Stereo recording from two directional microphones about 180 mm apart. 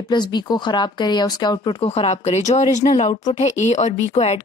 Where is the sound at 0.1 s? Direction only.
25° left (ahead or behind).